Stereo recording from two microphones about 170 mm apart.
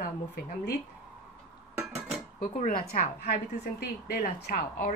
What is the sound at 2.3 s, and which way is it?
Speech, 50° left (ahead or behind).